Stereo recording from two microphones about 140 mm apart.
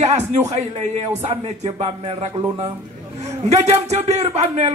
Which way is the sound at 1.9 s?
40° right (ahead or behind).